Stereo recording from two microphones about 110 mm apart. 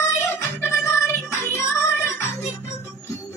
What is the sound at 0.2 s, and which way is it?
Music, 20° left (ahead or behind).